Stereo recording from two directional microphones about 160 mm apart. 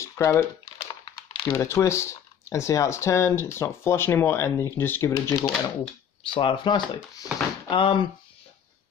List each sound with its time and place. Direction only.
0.0 s typing: 15° left (ahead or behind)
0.8 s speech: 30° left (ahead or behind)
6.2 s speech: 30° left (ahead or behind)